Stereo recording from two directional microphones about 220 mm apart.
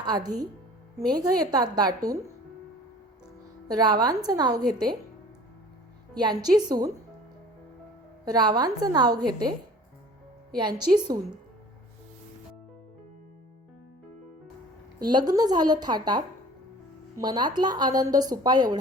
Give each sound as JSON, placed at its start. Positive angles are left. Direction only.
{"t": 0.0, "sound": "a woman's voice", "side_deg": -20}
{"t": 3.8, "sound": "a woman's voice", "side_deg": -20}
{"t": 6.1, "sound": "a woman's voice", "side_deg": -20}
{"t": 8.2, "sound": "a woman's voice", "side_deg": -20}
{"t": 10.6, "sound": "a woman's voice", "side_deg": -20}
{"t": 14.9, "sound": "a woman's voice", "side_deg": -20}